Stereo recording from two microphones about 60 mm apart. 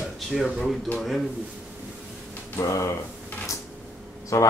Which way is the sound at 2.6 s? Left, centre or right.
Left.